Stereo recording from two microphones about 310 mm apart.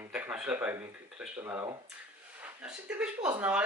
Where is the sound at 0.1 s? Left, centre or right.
Centre.